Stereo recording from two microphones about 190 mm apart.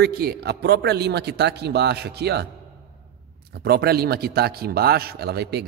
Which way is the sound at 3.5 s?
55° right (ahead or behind).